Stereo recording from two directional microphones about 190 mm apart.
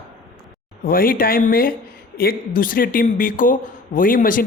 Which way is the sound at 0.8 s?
50° left (ahead or behind).